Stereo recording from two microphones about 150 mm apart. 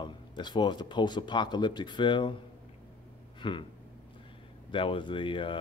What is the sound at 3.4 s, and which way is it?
Speech, 30° left (ahead or behind).